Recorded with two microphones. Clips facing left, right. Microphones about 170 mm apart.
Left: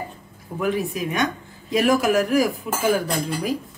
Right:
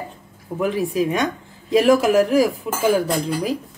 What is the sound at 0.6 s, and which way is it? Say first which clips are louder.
Speech: right 3 dB; 30° right (ahead or behind).